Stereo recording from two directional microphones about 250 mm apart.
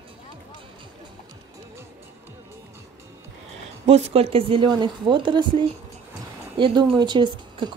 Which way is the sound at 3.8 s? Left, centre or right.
Right.